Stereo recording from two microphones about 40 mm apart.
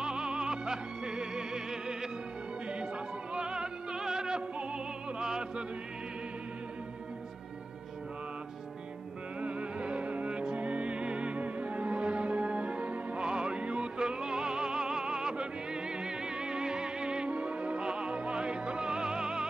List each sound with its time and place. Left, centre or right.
0.0 s music: centre
3.3 s music: right
9.4 s music: right